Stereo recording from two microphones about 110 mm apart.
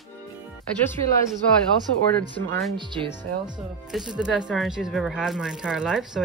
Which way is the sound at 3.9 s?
5° right (ahead or behind).